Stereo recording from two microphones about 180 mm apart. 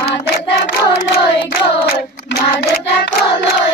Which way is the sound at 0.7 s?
70° left (ahead or behind).